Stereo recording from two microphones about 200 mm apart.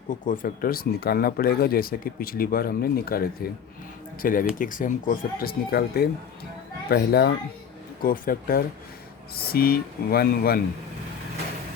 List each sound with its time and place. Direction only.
0.1 s speech: 45° left (ahead or behind)